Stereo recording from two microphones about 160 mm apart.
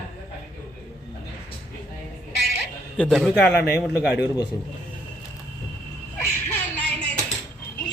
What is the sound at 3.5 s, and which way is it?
Speech, 90° left.